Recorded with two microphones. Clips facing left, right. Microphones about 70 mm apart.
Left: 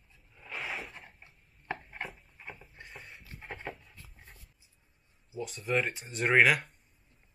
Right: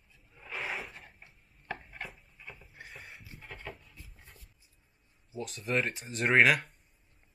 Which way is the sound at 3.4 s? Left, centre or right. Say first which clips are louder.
Left 4 dB; left.